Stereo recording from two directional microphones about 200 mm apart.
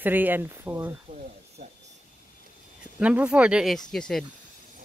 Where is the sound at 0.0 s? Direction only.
10° right (ahead or behind).